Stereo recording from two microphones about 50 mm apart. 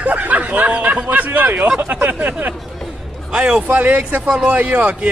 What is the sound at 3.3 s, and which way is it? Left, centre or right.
Speech, right.